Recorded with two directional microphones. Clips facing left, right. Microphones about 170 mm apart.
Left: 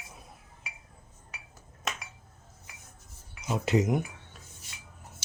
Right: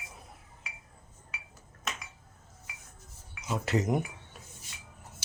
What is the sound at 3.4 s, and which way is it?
Speech, 15° left (ahead or behind).